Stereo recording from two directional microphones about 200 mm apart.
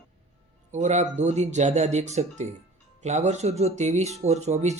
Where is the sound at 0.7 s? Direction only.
35° right (ahead or behind).